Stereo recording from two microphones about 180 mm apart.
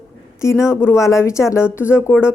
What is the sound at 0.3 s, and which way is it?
A woman's voice, 15° left (ahead or behind).